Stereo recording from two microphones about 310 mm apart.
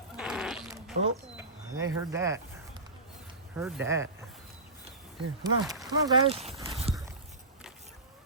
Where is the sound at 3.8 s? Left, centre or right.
Centre.